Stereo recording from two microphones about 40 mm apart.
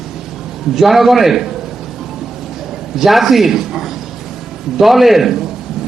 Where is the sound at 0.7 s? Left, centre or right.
Centre.